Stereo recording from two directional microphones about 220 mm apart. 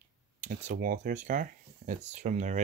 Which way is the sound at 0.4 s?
35° right (ahead or behind).